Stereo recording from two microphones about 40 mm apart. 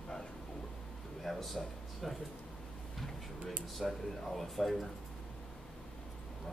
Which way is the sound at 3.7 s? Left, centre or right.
Centre.